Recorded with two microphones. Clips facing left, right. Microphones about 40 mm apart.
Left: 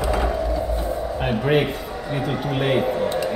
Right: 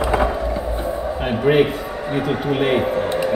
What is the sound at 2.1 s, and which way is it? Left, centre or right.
Speech, right.